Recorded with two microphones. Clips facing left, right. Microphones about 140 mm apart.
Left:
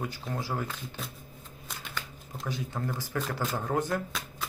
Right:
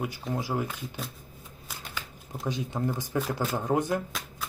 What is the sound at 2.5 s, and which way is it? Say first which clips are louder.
Speech: right 4 dB; 20° right (ahead or behind).